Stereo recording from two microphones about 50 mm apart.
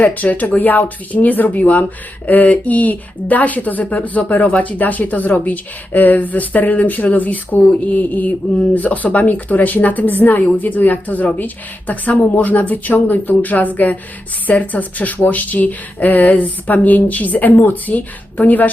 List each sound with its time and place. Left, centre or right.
0.0 s speech: left